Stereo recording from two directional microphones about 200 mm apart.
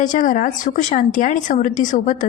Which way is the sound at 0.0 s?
40° left (ahead or behind).